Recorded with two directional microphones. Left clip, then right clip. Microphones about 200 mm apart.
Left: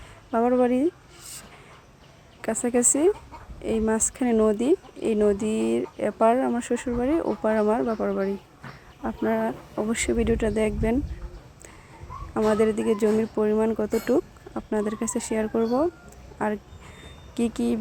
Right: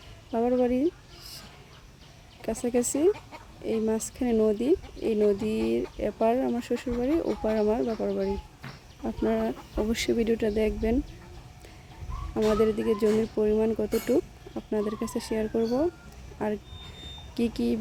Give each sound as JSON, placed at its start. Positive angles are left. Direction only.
{"t": 0.3, "sound": "speech", "side_deg": 5}
{"t": 2.4, "sound": "speech", "side_deg": 0}
{"t": 9.0, "sound": "speech", "side_deg": -10}
{"t": 12.5, "sound": "speech", "side_deg": 0}